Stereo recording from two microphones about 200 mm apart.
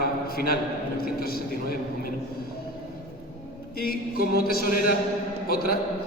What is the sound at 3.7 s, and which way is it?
A man's voice, 50° left (ahead or behind).